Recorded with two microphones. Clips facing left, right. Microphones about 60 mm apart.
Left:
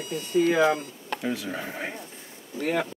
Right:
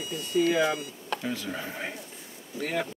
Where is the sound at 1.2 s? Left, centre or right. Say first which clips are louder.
Left 6 dB; centre.